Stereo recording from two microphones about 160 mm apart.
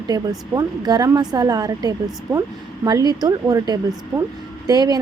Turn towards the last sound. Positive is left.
turn(degrees=-25)  # may be behind; listen again after turning